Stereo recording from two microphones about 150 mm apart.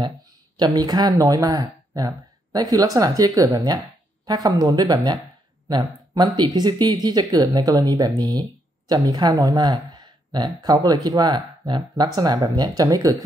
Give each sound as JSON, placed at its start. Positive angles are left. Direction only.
{"t": 0.6, "sound": "speech", "side_deg": -25}